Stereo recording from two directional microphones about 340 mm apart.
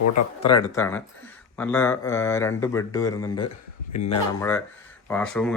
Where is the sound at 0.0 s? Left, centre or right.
Left.